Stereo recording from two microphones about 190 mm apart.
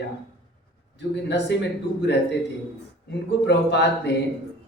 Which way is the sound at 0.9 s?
65° left (ahead or behind).